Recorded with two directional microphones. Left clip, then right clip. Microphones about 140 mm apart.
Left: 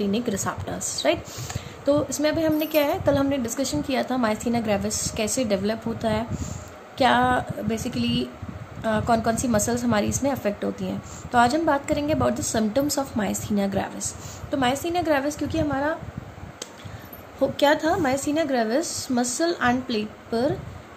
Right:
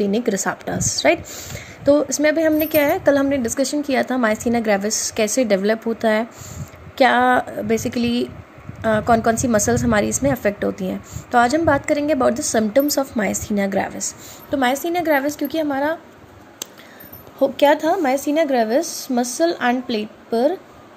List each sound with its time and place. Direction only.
0.0 s a woman's voice: 40° right (ahead or behind)
17.4 s a woman's voice: 35° right (ahead or behind)